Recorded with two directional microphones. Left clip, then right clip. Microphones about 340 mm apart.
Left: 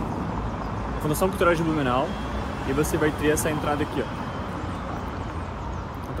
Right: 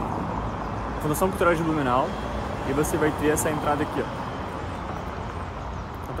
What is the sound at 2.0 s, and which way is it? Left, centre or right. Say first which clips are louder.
Vehicle: right 1 dB; right.